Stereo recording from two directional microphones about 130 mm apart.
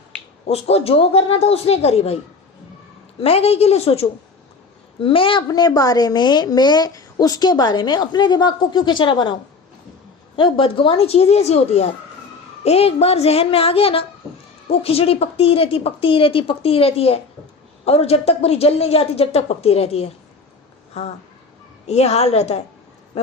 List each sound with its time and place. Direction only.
0.4 s a woman's voice: 50° left (ahead or behind)
3.2 s a woman's voice: 50° left (ahead or behind)
5.5 s a woman's voice: 30° left (ahead or behind); by 22.6 s 55° left (ahead or behind)
23.1 s a sound: 55° left (ahead or behind)